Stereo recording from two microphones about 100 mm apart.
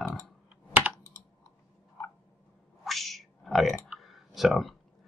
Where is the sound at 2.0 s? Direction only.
30° left (ahead or behind).